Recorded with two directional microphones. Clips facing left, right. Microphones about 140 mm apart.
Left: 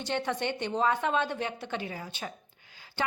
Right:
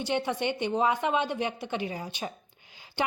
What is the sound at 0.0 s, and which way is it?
A woman's voice, 10° right (ahead or behind).